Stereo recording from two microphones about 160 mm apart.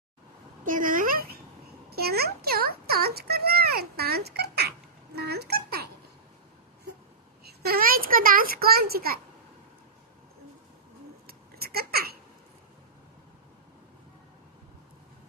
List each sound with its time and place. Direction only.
0.6 s speech: 55° right (ahead or behind)
1.9 s a child's voice: 80° right
7.4 s a child's voice: 70° right (ahead or behind)
11.3 s a sound: 70° right (ahead or behind)